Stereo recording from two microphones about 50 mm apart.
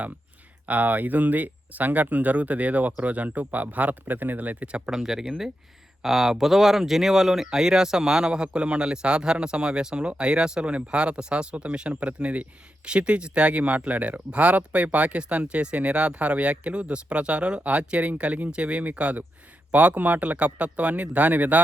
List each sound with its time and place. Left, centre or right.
0.7 s speech: right
4.9 s speech: centre; by 21.6 s right